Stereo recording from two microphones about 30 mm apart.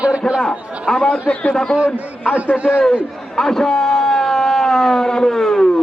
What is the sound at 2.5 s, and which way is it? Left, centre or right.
Speech, centre.